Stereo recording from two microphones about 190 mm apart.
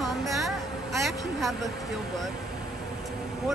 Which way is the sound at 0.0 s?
Centre (ahead or behind).